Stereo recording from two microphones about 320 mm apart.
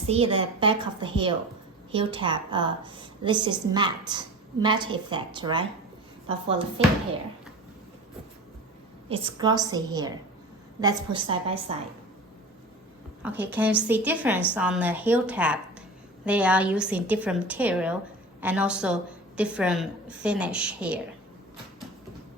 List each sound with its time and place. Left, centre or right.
0.1 s a woman's voice: centre
9.0 s a woman's voice: centre
13.2 s a woman's voice: centre